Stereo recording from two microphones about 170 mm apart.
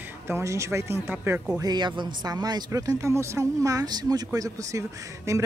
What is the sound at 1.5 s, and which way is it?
Speech, 25° right (ahead or behind).